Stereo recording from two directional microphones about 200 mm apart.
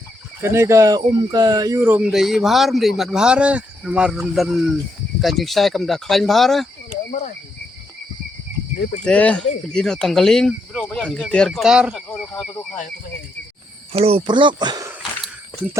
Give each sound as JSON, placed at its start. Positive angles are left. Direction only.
{"t": 0.4, "sound": "speech", "side_deg": -15}
{"t": 9.0, "sound": "speech", "side_deg": 5}
{"t": 13.9, "sound": "speech", "side_deg": -30}
{"t": 15.2, "sound": "a sound", "side_deg": -10}